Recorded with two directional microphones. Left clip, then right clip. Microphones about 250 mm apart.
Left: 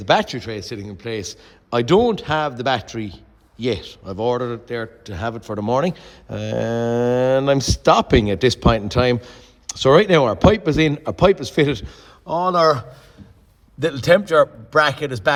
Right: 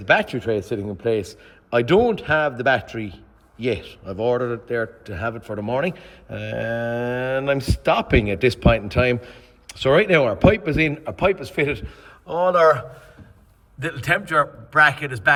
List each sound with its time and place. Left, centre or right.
0.0 s a man's voice: centre
13.7 s a man's voice: left